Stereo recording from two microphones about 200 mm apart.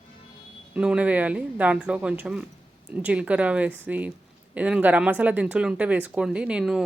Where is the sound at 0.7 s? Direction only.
5° right (ahead or behind).